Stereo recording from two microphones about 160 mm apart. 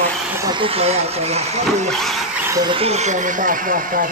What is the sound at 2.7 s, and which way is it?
Speech, 40° right (ahead or behind).